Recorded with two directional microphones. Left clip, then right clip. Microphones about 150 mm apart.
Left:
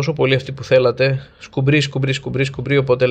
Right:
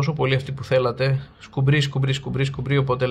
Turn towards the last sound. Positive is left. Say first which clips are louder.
# left 7 dB
turn(degrees=25)  # may be behind; listen again after turning